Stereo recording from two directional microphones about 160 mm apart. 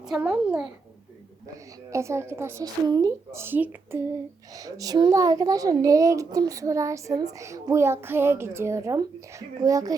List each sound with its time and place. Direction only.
0.0 s a child's voice: 5° right (ahead or behind)
1.9 s a woman's voice: 15° right (ahead or behind)